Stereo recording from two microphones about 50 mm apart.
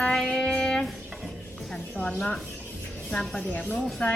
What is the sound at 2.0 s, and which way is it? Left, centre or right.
Speech, left.